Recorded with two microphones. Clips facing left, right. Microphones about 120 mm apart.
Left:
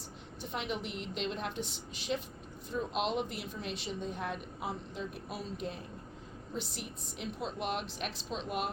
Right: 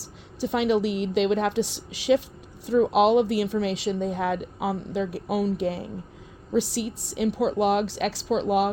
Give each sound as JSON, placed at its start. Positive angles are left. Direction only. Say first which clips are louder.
{"t": 0.0, "sound": "a woman's voice", "louder": "right 14 dB", "side_deg": -85}